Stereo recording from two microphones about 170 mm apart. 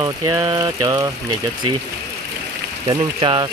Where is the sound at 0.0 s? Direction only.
20° right (ahead or behind).